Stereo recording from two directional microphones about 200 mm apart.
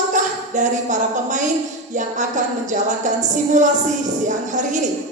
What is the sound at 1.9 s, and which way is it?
Music, 40° right (ahead or behind).